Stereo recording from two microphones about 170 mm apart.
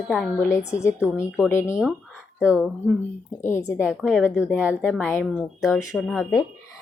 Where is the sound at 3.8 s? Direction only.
Centre (ahead or behind).